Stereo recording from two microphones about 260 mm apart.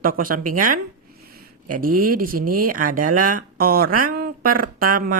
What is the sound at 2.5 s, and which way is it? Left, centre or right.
Speech, right.